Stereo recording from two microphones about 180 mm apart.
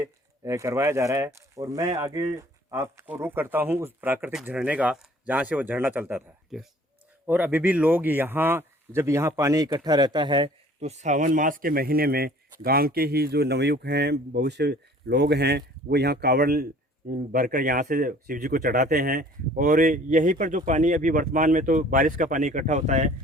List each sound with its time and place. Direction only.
0.0 s speech: 15° right (ahead or behind); by 23.1 s 40° right (ahead or behind)